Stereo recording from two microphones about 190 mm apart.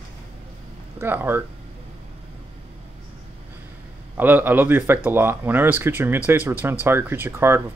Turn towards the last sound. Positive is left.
turn(degrees=-10)  # may be behind; listen again after turning